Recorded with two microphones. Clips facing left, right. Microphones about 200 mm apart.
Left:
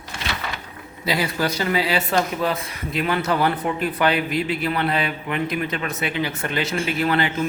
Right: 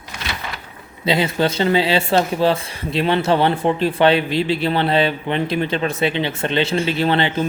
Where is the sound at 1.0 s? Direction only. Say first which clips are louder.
Right 5 dB; 25° right (ahead or behind).